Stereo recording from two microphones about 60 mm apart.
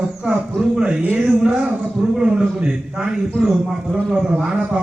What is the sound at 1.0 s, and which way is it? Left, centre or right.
Speech, right.